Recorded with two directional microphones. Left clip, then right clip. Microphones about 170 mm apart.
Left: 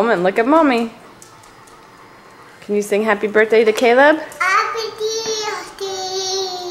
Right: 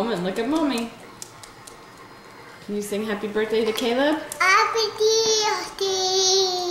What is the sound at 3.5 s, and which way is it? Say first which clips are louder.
Speech: left 9 dB; 20° left (ahead or behind).